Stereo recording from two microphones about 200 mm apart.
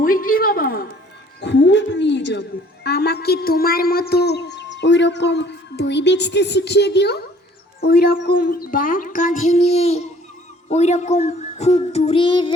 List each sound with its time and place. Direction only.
0.0 s a woman's voice: 45° left (ahead or behind)
1.4 s a sound: 60° left (ahead or behind)
7.8 s speech: 50° left (ahead or behind); by 10.1 s 30° left (ahead or behind)
10.7 s child singing: 35° left (ahead or behind)